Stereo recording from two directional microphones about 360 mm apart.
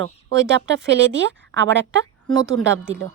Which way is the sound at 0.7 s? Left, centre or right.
Right.